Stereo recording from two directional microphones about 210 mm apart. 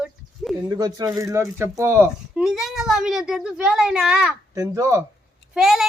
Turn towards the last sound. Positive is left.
turn(degrees=0)  # may be behind; listen again after turning